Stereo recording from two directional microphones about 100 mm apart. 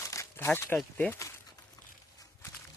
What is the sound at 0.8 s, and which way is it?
Speech, 10° left (ahead or behind).